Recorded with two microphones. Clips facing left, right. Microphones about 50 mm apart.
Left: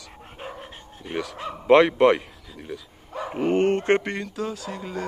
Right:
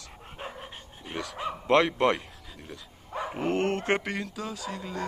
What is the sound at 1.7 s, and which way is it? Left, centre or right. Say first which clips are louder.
Speech: left 7 dB; centre.